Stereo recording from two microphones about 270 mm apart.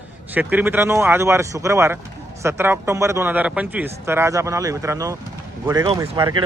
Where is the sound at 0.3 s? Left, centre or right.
Centre.